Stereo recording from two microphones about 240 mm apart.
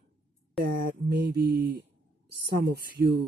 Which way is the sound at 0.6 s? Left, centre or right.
Right.